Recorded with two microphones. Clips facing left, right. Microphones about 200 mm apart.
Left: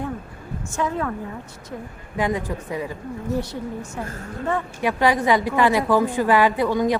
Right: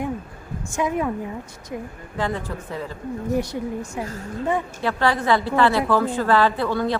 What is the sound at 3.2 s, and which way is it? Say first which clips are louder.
Speech: right 2 dB; 15° right (ahead or behind).